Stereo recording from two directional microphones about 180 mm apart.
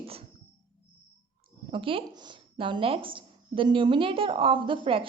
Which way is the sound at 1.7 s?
30° right (ahead or behind).